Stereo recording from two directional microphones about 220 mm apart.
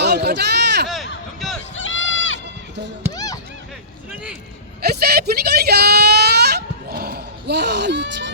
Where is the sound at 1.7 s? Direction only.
60° left (ahead or behind).